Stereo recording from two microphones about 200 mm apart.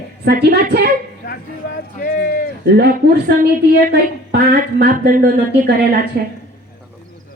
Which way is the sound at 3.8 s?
50° right (ahead or behind).